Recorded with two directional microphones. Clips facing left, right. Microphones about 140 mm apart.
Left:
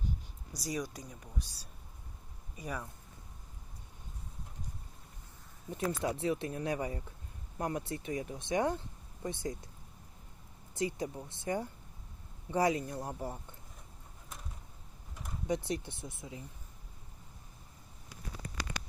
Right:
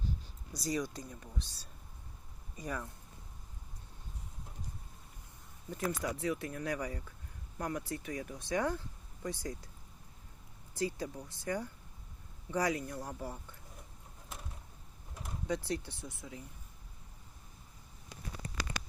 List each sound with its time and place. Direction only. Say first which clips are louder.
0.5 s speech: right 2 dB; 10° left (ahead or behind)
5.7 s speech: left 2 dB; 20° left (ahead or behind)
10.8 s speech: left 1 dB; 20° left (ahead or behind)
15.4 s speech: left 2 dB; 20° left (ahead or behind)